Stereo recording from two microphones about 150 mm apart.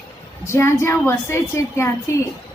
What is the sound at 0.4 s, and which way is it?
A woman's voice, 15° left (ahead or behind).